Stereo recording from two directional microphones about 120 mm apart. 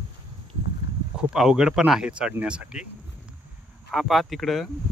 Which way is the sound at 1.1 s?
5° right (ahead or behind).